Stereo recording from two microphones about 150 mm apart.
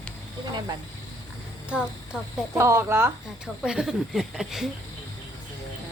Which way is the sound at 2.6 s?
20° right (ahead or behind).